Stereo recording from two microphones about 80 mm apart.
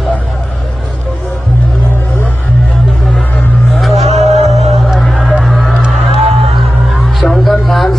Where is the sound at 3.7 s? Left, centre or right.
Centre.